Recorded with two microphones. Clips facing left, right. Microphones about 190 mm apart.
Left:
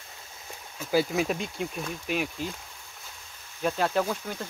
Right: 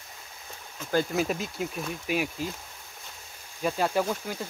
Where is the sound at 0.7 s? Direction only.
5° left (ahead or behind).